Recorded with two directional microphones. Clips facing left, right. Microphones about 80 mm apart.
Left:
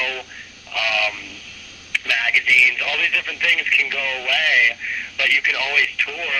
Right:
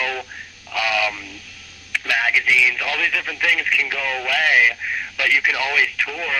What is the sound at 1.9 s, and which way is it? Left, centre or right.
Speech, right.